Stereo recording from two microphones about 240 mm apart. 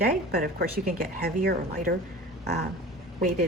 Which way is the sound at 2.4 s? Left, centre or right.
Right.